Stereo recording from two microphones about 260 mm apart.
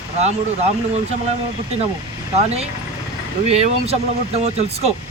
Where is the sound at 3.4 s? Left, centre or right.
Right.